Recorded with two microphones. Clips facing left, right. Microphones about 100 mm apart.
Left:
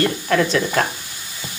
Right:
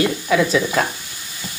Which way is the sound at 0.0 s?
5° right (ahead or behind).